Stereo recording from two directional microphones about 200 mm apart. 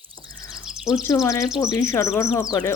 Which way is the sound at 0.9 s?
15° left (ahead or behind).